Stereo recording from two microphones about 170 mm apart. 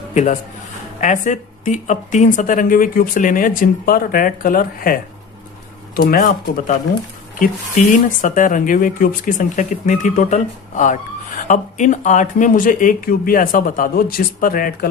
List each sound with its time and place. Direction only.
0.1 s a man's voice: 45° left (ahead or behind)
6.0 s speech: 60° left (ahead or behind)
8.2 s speech: 50° left (ahead or behind)